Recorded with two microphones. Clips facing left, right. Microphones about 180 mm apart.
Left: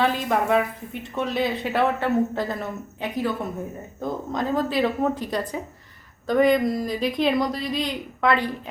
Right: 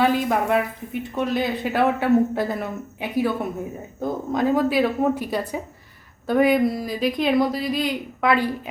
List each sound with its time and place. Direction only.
0.0 s a man's voice: 5° right (ahead or behind)